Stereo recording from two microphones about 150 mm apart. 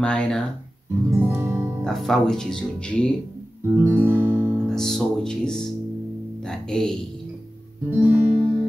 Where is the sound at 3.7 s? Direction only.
10° right (ahead or behind).